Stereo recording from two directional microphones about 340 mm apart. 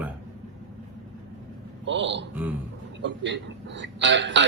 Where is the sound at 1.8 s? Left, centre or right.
Right.